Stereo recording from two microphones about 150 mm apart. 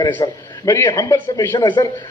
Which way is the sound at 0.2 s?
20° left (ahead or behind).